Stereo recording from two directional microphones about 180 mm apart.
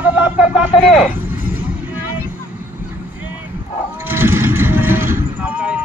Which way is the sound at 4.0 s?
10° right (ahead or behind).